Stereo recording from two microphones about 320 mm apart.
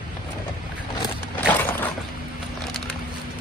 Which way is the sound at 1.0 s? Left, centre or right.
Centre.